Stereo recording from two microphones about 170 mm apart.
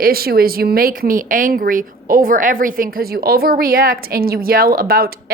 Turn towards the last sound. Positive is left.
turn(degrees=-60)  # may be behind; listen again after turning